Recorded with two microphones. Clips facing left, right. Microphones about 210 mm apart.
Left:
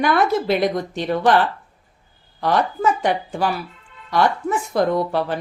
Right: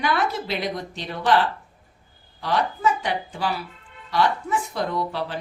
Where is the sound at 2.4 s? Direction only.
50° left (ahead or behind).